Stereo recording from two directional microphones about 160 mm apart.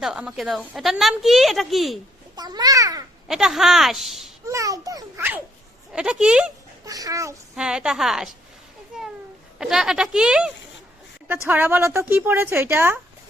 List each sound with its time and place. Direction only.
0.0 s a woman's voice: 5° right (ahead or behind)
2.3 s a child's voice: 25° right (ahead or behind)
3.2 s a woman's voice: 5° right (ahead or behind)
4.4 s a child's voice: 20° right (ahead or behind)
5.9 s a woman's voice: 5° right (ahead or behind)
6.8 s a child's voice: 20° right (ahead or behind)
7.5 s a woman's voice: 5° right (ahead or behind)
8.9 s a sound: 5° right (ahead or behind)
9.6 s a woman's voice: 5° right (ahead or behind)